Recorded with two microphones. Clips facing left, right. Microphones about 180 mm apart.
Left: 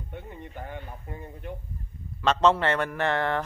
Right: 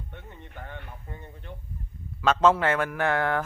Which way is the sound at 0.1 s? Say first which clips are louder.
Left 5 dB; 10° left (ahead or behind).